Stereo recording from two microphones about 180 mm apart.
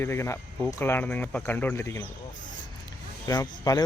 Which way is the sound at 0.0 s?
15° left (ahead or behind).